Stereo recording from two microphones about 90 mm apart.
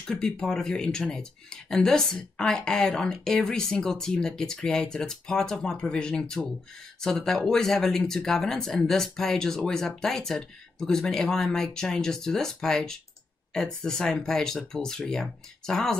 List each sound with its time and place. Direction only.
0.0 s speech: 10° left (ahead or behind)